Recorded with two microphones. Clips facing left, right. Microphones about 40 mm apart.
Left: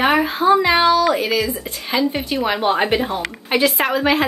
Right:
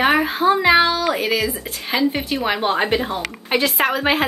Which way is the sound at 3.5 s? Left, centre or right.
Centre.